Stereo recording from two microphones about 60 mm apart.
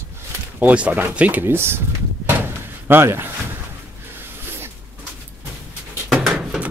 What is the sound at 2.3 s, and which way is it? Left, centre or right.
Door, right.